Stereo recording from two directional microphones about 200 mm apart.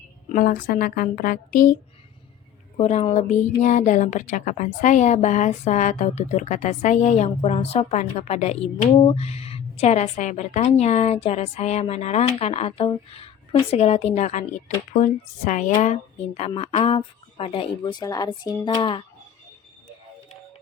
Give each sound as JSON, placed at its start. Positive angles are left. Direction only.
{"t": 0.3, "sound": "speech", "side_deg": 45}
{"t": 2.7, "sound": "a woman's voice", "side_deg": 30}